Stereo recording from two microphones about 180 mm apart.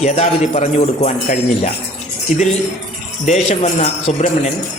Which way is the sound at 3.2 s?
40° left (ahead or behind).